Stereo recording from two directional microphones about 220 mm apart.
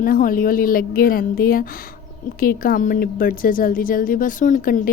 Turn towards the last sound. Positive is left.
turn(degrees=35)  # may be behind; listen again after turning